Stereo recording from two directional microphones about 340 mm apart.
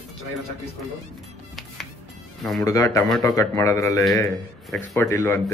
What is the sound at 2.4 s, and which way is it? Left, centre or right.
A man's voice, centre.